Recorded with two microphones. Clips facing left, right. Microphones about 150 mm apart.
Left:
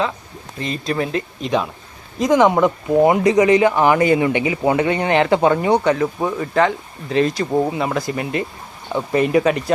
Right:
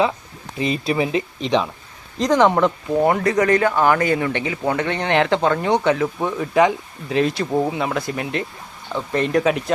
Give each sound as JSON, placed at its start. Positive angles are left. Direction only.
{"t": 0.6, "sound": "speech", "side_deg": -5}